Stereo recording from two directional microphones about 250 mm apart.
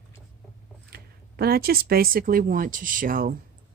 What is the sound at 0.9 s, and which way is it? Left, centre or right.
Speech, right.